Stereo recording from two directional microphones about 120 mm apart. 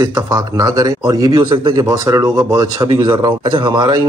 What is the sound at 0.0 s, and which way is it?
Speech, 30° right (ahead or behind).